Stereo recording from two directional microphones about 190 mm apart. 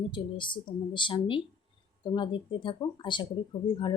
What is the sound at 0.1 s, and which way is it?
Speech, 25° left (ahead or behind).